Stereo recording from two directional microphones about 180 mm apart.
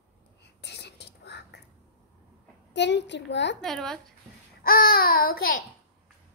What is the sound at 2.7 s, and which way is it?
Speech, 75° left (ahead or behind).